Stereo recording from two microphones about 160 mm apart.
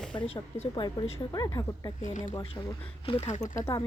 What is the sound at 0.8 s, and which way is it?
A woman's voice, 25° left (ahead or behind).